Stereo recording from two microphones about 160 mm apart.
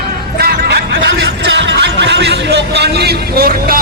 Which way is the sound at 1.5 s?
90° right.